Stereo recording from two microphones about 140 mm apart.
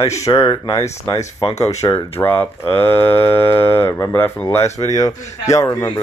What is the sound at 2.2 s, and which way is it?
Speech, 15° left (ahead or behind).